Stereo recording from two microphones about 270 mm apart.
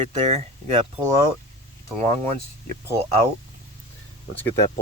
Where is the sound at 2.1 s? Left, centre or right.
Right.